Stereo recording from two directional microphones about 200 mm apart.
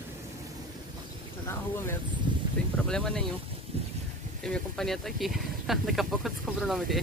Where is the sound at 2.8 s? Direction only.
5° left (ahead or behind).